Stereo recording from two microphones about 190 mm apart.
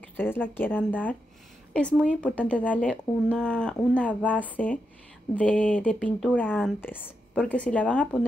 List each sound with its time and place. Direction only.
0.2 s speech: 10° left (ahead or behind)